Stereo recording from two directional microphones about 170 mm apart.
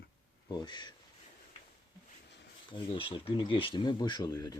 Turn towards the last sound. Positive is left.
turn(degrees=20)  # may be behind; listen again after turning